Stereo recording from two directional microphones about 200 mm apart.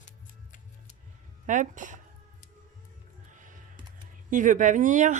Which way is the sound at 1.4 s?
40° right (ahead or behind).